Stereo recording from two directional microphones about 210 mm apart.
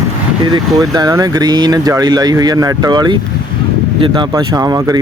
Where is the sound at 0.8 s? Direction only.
20° right (ahead or behind).